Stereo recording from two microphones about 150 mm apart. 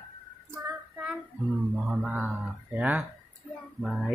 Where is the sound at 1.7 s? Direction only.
10° right (ahead or behind).